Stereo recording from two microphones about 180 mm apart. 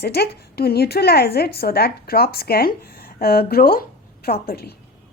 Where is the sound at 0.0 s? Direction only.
65° left (ahead or behind).